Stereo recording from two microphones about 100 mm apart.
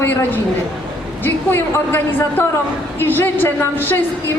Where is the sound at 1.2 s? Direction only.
20° left (ahead or behind).